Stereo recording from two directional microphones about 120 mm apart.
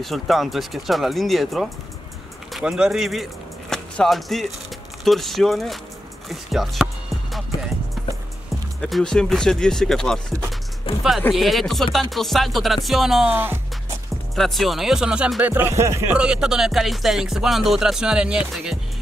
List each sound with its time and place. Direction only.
0.0 s speech: centre (ahead or behind)
3.7 s music: 5° left (ahead or behind)
5.0 s speech: centre (ahead or behind)
7.3 s music: centre (ahead or behind)
8.8 s speech: centre (ahead or behind)
10.9 s music: 45° left (ahead or behind)
11.3 s speech: centre (ahead or behind)
13.3 s speech: 15° right (ahead or behind)
14.3 s speech: centre (ahead or behind)
15.5 s music: 20° right (ahead or behind)
16.1 s speech: 10° right (ahead or behind)